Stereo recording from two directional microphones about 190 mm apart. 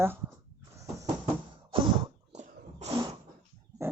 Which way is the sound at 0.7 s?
15° right (ahead or behind).